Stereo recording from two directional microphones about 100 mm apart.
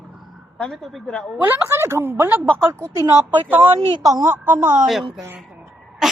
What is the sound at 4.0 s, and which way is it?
Speech, 40° right (ahead or behind).